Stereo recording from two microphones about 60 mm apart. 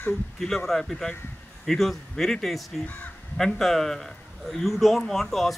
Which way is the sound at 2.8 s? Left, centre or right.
Left.